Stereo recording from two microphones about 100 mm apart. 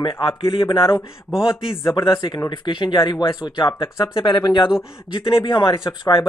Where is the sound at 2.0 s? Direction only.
55° left (ahead or behind).